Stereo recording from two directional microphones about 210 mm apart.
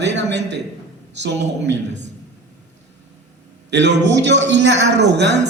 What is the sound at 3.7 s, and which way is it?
A man's voice, 55° right (ahead or behind).